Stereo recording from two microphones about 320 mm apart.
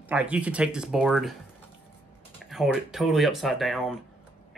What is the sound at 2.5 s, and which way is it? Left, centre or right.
Speech, centre.